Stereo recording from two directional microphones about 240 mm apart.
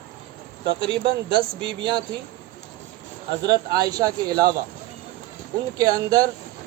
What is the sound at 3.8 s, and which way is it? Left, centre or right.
Speech, centre.